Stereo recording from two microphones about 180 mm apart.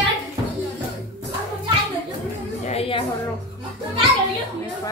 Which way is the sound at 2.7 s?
30° left (ahead or behind).